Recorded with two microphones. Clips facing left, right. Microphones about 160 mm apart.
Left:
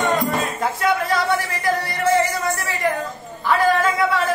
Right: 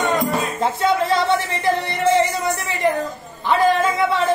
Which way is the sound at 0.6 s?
25° right (ahead or behind).